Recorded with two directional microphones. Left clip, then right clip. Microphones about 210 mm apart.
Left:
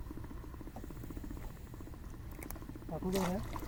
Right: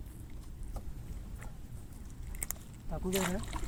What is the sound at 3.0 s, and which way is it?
Speech, 20° left (ahead or behind).